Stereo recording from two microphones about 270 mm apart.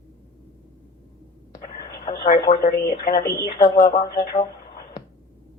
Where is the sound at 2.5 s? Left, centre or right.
Left.